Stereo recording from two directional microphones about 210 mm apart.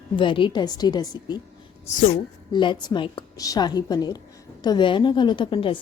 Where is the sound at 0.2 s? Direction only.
25° left (ahead or behind).